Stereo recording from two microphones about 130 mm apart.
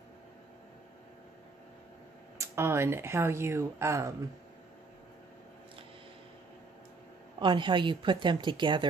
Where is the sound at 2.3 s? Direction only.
20° right (ahead or behind).